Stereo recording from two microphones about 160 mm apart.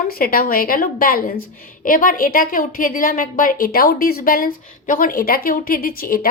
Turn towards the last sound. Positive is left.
turn(degrees=65)  # may be behind; listen again after turning